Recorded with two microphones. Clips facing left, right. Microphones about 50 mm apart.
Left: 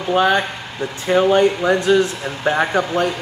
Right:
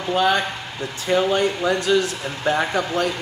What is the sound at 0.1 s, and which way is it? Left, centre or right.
Speech, left.